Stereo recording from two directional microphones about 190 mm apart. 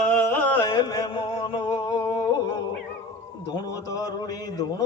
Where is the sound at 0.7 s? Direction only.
20° left (ahead or behind).